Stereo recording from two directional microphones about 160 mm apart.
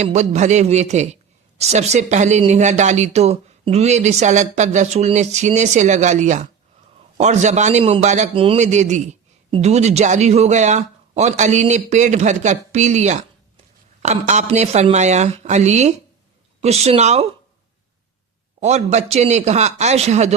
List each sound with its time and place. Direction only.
0.0 s speech: 45° right (ahead or behind)
18.6 s speech: 45° right (ahead or behind)